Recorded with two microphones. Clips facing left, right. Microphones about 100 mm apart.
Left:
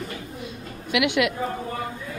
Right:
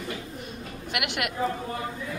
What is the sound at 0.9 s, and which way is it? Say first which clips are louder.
Speech: left 9 dB; 45° right (ahead or behind).